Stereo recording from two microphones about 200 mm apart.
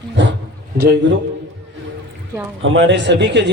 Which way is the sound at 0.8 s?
55° right (ahead or behind).